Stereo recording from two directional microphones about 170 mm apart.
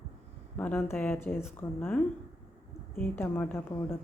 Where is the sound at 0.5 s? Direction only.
10° left (ahead or behind).